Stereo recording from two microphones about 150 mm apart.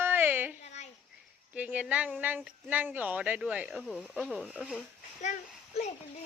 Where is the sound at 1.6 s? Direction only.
10° right (ahead or behind).